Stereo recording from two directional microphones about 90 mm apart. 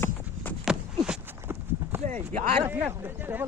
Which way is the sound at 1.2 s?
25° right (ahead or behind).